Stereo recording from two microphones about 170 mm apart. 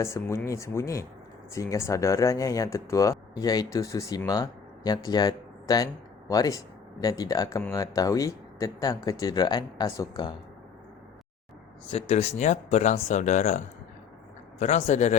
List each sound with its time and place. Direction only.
0.0 s speech: 15° left (ahead or behind)
11.9 s a man's voice: 35° left (ahead or behind)
14.6 s a man's voice: 40° left (ahead or behind)